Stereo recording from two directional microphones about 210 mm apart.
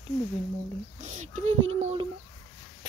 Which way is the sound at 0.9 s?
35° right (ahead or behind).